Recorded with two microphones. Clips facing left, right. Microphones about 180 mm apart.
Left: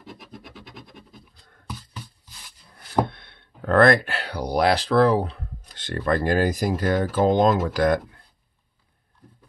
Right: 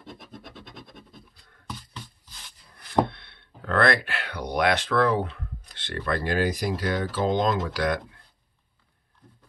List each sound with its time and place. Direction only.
0.0 s scratch: 10° left (ahead or behind)
3.1 s speech: 45° left (ahead or behind)
5.8 s speech: 45° left (ahead or behind)